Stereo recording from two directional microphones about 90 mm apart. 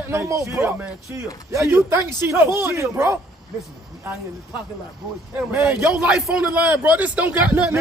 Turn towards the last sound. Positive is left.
turn(degrees=-15)  # may be behind; listen again after turning